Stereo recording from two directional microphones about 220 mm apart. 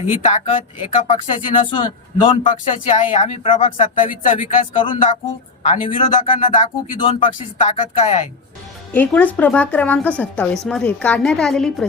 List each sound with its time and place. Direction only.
0.1 s speech: 35° left (ahead or behind)
2.4 s speech: 35° left (ahead or behind)
8.9 s a woman's voice: 5° left (ahead or behind)